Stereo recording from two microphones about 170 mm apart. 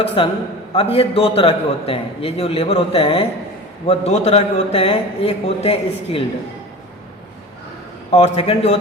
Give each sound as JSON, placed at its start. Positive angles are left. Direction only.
{"t": 0.2, "sound": "a man's voice", "side_deg": 30}
{"t": 8.1, "sound": "a man's voice", "side_deg": 35}